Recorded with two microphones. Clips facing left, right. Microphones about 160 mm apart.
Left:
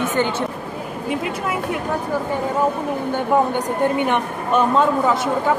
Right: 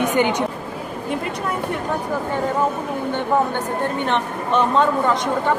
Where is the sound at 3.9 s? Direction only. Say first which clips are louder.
Left 2 dB; 10° left (ahead or behind).